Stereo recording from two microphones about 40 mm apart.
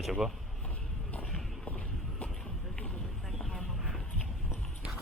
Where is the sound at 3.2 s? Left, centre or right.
Centre.